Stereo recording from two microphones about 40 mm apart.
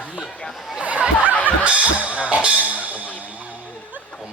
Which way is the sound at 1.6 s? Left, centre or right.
Right.